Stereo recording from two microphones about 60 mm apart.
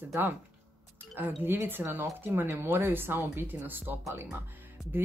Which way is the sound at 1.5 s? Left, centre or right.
Right.